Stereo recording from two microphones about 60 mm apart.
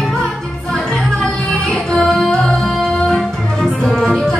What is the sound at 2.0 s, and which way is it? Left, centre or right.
Music, centre.